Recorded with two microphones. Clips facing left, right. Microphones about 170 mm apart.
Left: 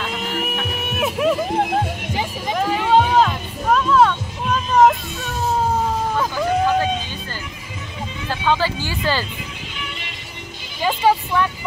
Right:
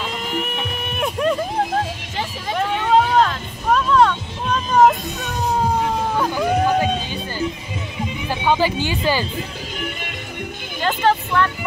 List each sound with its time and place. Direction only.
0.0 s a sound: 5° left (ahead or behind)
2.5 s hubbub: 5° left (ahead or behind)
3.7 s music: centre (ahead or behind)
6.3 s a sound: 15° right (ahead or behind)
8.3 s speech: 15° right (ahead or behind)
10.8 s speech: 10° left (ahead or behind)